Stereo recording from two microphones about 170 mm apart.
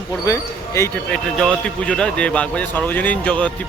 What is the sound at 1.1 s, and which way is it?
A man's voice, 5° left (ahead or behind).